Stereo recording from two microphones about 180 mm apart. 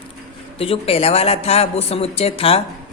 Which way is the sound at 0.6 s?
35° left (ahead or behind).